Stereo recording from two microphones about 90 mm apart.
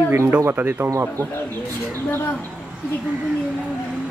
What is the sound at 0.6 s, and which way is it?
Speech, 25° right (ahead or behind).